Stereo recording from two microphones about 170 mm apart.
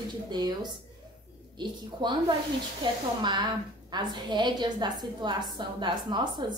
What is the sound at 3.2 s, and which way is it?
A woman's voice, 25° right (ahead or behind).